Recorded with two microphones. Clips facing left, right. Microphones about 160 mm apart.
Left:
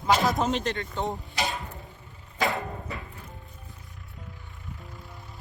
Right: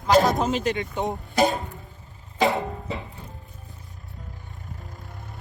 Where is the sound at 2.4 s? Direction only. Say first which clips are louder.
Right 6 dB; 20° right (ahead or behind).